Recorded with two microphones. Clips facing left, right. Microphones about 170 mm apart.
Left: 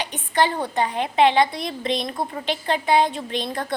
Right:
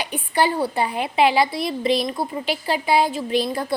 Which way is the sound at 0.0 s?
10° right (ahead or behind).